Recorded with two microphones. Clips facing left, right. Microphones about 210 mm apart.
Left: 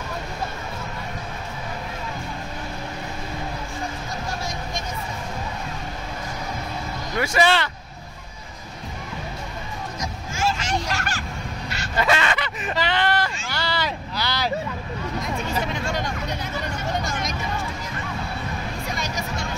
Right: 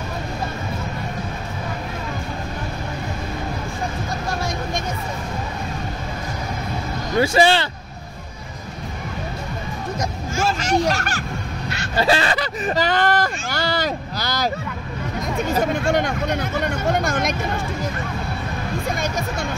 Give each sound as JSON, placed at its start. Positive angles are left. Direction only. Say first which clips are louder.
{"t": 4.4, "sound": "vehicle", "louder": "right 5 dB", "side_deg": -60}
{"t": 7.2, "sound": "speech", "louder": "right 4 dB", "side_deg": -30}
{"t": 9.9, "sound": "hubbub", "louder": "right 6 dB", "side_deg": -55}
{"t": 11.9, "sound": "a sound", "louder": "right 3 dB", "side_deg": -30}
{"t": 15.5, "sound": "vehicle", "louder": "right 10 dB", "side_deg": -50}
{"t": 18.9, "sound": "music", "louder": "right 5 dB", "side_deg": -55}